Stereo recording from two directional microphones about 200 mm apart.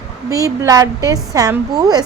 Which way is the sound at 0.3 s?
15° right (ahead or behind).